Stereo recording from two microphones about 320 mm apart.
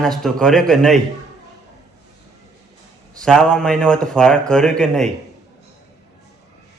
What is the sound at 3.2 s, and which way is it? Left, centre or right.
Speech, centre.